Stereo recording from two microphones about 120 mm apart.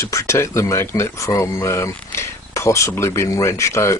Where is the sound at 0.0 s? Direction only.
25° left (ahead or behind).